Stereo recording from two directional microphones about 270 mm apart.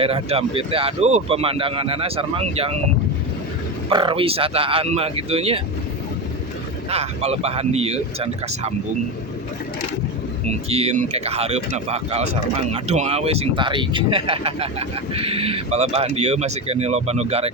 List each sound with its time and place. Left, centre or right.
0.0 s speech: right
3.8 s speech: centre
6.9 s speech: right
10.5 s speech: right